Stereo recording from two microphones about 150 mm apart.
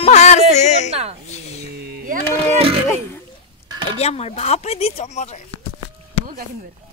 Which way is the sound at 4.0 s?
45° left (ahead or behind).